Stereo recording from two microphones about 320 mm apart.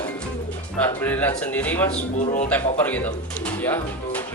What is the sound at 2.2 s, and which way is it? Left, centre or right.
Speech, left.